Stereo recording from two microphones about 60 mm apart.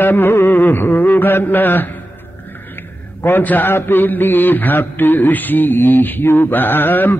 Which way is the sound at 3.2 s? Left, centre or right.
Left.